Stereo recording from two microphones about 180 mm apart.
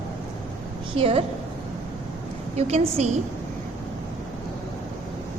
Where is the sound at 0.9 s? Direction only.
30° right (ahead or behind).